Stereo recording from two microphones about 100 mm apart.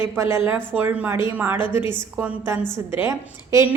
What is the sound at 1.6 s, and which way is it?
Speech, 50° left (ahead or behind).